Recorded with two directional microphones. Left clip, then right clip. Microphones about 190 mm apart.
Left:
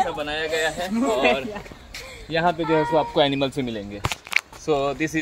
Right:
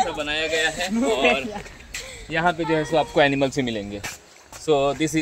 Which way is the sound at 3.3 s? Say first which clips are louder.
Right 2 dB; 20° right (ahead or behind).